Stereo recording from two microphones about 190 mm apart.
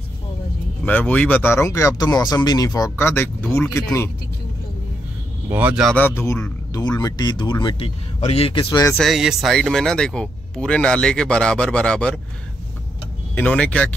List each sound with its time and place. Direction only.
0.8 s speech: 10° left (ahead or behind)
5.5 s speech: 10° right (ahead or behind)
5.9 s speech: 10° left (ahead or behind)
8.9 s speech: centre (ahead or behind)
13.3 s speech: 10° left (ahead or behind)